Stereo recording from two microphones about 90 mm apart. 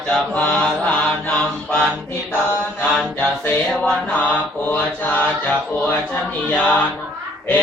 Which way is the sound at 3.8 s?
10° left (ahead or behind).